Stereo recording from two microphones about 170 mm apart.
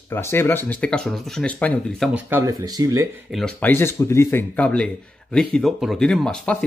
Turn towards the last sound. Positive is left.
turn(degrees=5)  # may be behind; listen again after turning